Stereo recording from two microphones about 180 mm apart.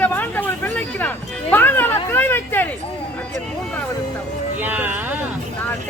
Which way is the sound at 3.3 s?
5° left (ahead or behind).